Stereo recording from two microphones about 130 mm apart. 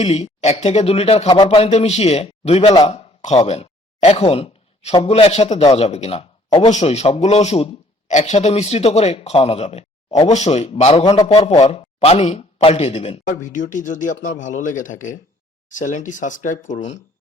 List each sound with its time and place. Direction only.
0.0 s a man's voice: 55° left (ahead or behind)
3.2 s a sound: 55° left (ahead or behind)
5.0 s speech: 55° left (ahead or behind)
6.7 s speech: 60° left (ahead or behind)
8.1 s speech: 65° left (ahead or behind)
13.4 s speech: 80° left; by 17.0 s 60° left (ahead or behind)